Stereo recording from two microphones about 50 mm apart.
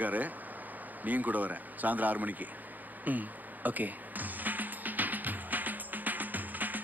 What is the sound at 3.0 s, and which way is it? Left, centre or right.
Music, right.